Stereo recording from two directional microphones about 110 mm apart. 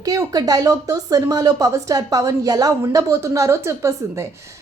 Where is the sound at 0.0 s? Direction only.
35° right (ahead or behind).